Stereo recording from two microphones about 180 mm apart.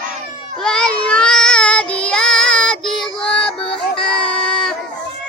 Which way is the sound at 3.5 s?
30° left (ahead or behind).